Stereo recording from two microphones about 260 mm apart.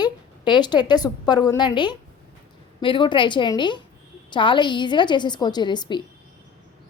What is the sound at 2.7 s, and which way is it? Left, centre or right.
A woman's voice, centre.